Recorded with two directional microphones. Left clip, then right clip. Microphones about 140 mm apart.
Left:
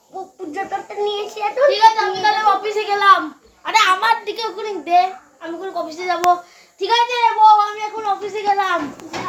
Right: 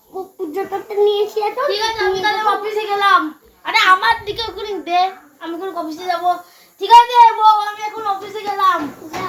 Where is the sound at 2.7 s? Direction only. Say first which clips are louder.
Right 1 dB; 60° left (ahead or behind).